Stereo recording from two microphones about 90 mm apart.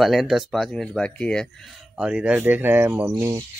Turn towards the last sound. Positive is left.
turn(degrees=-30)  # may be behind; listen again after turning